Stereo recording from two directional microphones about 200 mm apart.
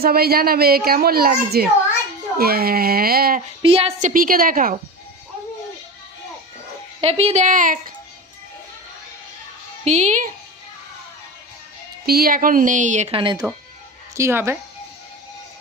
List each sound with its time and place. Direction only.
0.0 s a child's voice: 50° right (ahead or behind)
3.6 s a woman's voice: 30° right (ahead or behind)
4.1 s a child's voice: 45° right (ahead or behind)
7.0 s a woman's voice: 30° right (ahead or behind)
9.8 s a woman's voice: 35° right (ahead or behind)
12.0 s a woman's voice: 50° right (ahead or behind); by 13.4 s 25° right (ahead or behind)
14.2 s speech: 15° right (ahead or behind)